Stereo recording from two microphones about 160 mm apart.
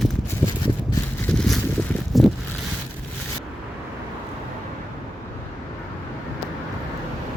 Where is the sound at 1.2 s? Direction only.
5° left (ahead or behind).